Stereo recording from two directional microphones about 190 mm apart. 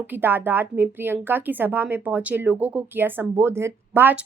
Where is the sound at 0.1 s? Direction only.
10° right (ahead or behind).